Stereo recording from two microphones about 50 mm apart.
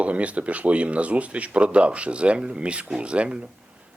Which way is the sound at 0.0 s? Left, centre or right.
Right.